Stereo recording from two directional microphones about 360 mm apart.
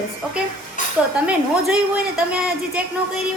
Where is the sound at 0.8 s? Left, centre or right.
Left.